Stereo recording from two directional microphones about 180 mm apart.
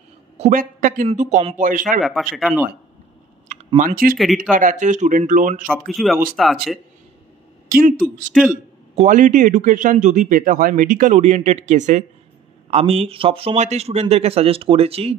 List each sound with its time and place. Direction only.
0.4 s a man's voice: 45° right (ahead or behind)
2.0 s speech: centre (ahead or behind)
3.4 s speech: 45° right (ahead or behind)
5.7 s speech: centre (ahead or behind)
7.7 s speech: 50° right (ahead or behind)
8.3 s speech: centre (ahead or behind)
8.9 s speech: 45° right (ahead or behind)